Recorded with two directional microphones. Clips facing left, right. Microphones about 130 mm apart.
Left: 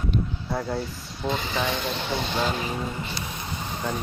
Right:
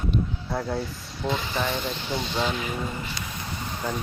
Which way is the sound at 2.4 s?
40° left (ahead or behind).